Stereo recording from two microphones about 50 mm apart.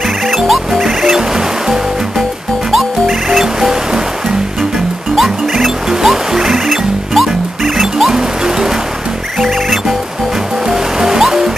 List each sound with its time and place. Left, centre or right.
0.3 s music: centre